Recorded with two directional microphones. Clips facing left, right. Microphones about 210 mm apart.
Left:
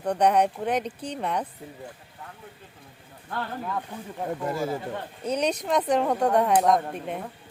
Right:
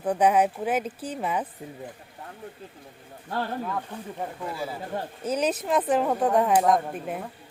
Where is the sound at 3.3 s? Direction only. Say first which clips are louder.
Right 3 dB; 35° right (ahead or behind).